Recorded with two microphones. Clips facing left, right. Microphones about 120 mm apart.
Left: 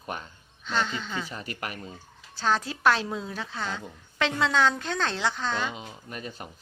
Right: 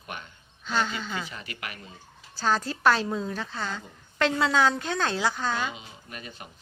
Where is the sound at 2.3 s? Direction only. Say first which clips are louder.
Even; centre (ahead or behind).